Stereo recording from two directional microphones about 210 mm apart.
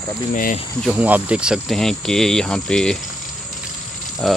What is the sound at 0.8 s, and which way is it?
Speech, 5° right (ahead or behind).